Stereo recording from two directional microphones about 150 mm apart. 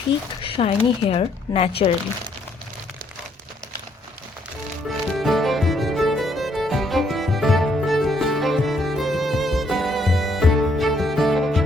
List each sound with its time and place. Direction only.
0.4 s speech: 40° left (ahead or behind)
4.9 s music: centre (ahead or behind)